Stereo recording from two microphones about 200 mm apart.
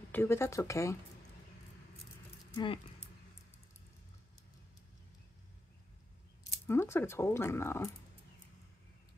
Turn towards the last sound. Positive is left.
turn(degrees=15)  # may be behind; listen again after turning